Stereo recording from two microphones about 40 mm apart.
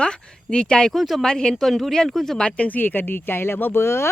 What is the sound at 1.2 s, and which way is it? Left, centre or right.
Speech, centre.